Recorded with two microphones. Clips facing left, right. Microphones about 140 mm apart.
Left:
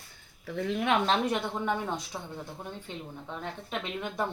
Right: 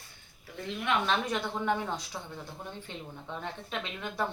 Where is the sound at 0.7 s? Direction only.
50° left (ahead or behind).